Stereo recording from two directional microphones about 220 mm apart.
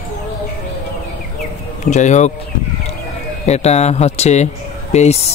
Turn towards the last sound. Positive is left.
turn(degrees=30)  # may be behind; listen again after turning